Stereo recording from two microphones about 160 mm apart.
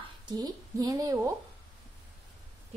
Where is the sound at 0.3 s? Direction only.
25° right (ahead or behind).